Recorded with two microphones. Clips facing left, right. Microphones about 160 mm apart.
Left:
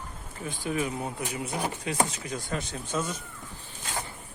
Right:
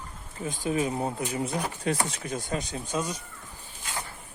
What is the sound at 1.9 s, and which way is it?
Speech, 45° right (ahead or behind).